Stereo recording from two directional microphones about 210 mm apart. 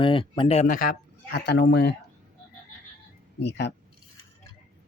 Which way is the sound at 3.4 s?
55° left (ahead or behind).